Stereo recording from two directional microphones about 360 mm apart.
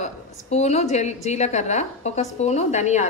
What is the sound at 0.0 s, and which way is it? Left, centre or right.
A woman's voice, centre.